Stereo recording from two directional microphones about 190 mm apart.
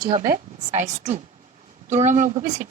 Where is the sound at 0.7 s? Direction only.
40° right (ahead or behind).